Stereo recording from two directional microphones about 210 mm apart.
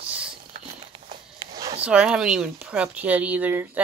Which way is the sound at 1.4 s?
15° right (ahead or behind).